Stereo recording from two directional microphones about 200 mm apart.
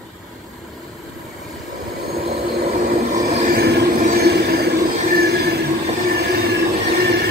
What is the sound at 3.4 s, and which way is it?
Vehicle, 50° right (ahead or behind).